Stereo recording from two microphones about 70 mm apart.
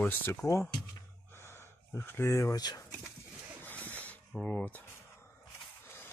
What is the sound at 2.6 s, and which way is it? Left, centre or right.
Speech, left.